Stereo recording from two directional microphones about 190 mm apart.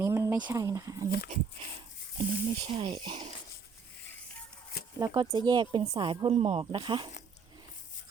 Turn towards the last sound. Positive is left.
turn(degrees=-25)  # may be behind; listen again after turning